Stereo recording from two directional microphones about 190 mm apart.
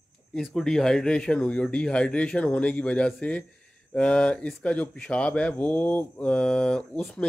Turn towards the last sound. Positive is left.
turn(degrees=5)  # may be behind; listen again after turning